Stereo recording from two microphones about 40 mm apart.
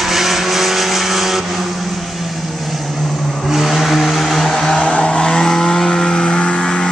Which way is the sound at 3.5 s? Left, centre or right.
Centre.